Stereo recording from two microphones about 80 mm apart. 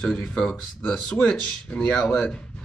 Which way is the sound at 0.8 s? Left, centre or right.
Centre.